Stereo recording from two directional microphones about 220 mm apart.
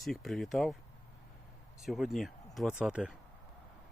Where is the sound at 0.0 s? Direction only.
Centre (ahead or behind).